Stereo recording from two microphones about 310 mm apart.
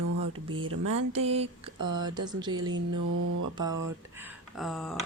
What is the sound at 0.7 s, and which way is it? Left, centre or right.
Mantra, right.